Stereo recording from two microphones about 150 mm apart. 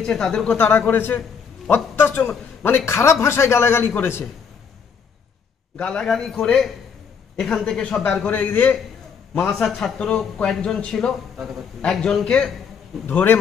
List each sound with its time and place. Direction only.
0.0 s a man's voice: 5° left (ahead or behind)
5.8 s a man's voice: 5° left (ahead or behind)
9.5 s a man's voice: centre (ahead or behind)